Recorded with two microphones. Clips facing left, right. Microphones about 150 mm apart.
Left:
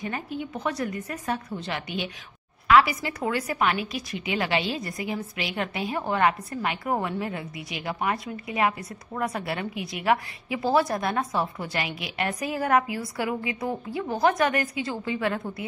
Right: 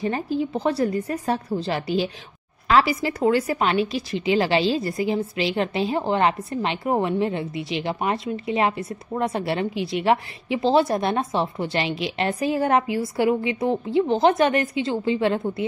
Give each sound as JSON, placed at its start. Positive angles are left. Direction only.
{"t": 0.0, "sound": "a woman's voice", "side_deg": -30}